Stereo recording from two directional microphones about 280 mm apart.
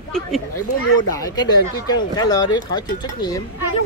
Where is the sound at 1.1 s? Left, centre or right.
Centre.